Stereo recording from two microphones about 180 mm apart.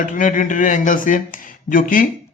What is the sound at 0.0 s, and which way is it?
A man's voice, 45° left (ahead or behind).